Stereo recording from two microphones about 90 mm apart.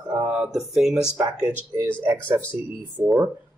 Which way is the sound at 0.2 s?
20° right (ahead or behind).